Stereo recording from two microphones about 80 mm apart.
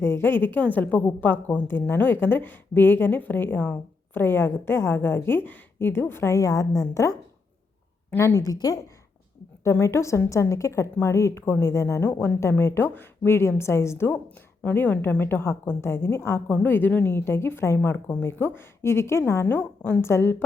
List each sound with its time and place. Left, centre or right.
0.0 s a woman's voice: left
8.4 s a woman's voice: left
9.6 s a woman's voice: left
12.0 s a woman's voice: left
14.6 s a woman's voice: left
16.5 s a woman's voice: left